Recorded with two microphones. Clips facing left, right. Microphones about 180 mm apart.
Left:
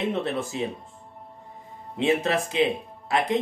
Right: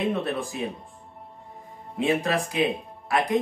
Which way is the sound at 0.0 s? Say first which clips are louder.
Even; 25° left (ahead or behind).